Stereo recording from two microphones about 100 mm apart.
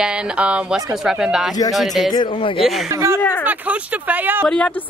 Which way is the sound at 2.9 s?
30° right (ahead or behind).